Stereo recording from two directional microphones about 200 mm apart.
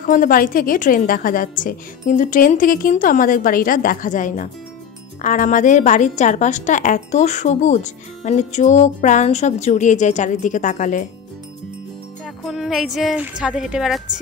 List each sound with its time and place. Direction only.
0.0 s a woman's voice: 40° left (ahead or behind)
12.4 s a woman's voice: centre (ahead or behind)